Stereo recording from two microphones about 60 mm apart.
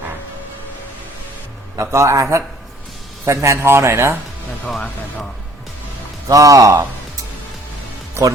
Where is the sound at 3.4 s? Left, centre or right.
Right.